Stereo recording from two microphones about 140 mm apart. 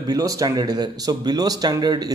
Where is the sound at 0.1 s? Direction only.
25° right (ahead or behind).